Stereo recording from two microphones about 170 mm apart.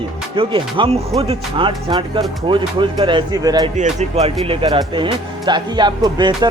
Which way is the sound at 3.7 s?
40° right (ahead or behind).